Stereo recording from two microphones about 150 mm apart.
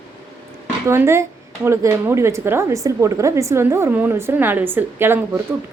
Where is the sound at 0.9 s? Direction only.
15° right (ahead or behind).